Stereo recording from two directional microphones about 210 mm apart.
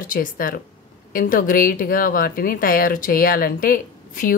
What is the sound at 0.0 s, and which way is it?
A woman's voice, 40° left (ahead or behind).